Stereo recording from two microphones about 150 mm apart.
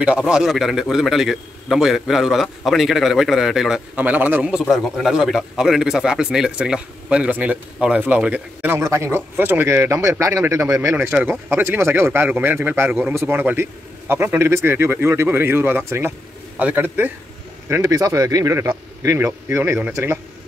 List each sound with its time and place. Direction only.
0.0 s a man's voice: 5° right (ahead or behind)